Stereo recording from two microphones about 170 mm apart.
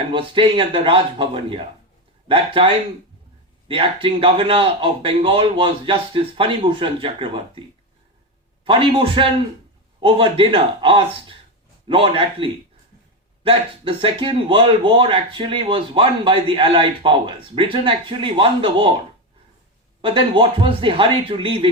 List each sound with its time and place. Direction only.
0.1 s speech: 30° right (ahead or behind)
8.6 s speech: 30° right (ahead or behind)
20.0 s speech: 30° right (ahead or behind)